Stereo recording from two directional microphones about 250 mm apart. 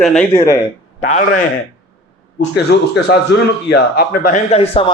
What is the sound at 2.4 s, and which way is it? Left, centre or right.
Speech, left.